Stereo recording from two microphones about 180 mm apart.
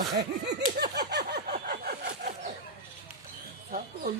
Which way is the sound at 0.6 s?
60° right (ahead or behind).